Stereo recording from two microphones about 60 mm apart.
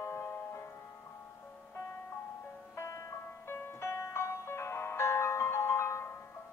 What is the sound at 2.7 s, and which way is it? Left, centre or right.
Music, left.